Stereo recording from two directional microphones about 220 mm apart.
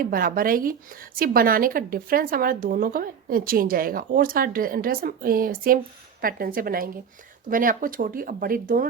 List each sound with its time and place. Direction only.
0.0 s a woman's voice: 40° right (ahead or behind)